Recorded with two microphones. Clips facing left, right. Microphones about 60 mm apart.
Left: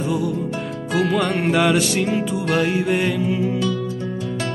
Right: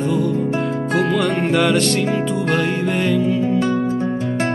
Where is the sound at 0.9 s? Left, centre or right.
Centre.